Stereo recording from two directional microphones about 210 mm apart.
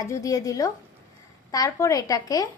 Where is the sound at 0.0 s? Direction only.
15° left (ahead or behind).